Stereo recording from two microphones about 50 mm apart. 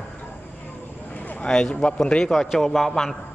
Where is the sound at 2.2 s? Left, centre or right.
Centre.